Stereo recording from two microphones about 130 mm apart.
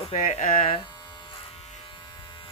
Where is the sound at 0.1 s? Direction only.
60° left (ahead or behind).